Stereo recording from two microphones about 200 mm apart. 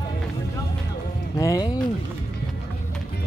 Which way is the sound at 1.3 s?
20° left (ahead or behind).